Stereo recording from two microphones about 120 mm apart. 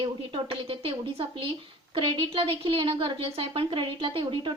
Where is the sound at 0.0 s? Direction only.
45° right (ahead or behind).